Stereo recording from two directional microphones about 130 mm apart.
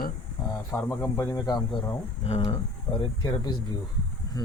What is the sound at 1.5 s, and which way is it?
Speech, 35° left (ahead or behind).